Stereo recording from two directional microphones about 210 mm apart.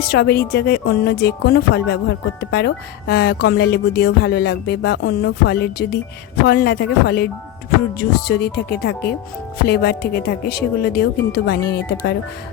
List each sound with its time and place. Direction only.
0.1 s speech: 50° left (ahead or behind)